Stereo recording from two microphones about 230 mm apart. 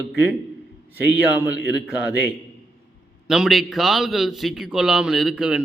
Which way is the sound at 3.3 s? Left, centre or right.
Centre.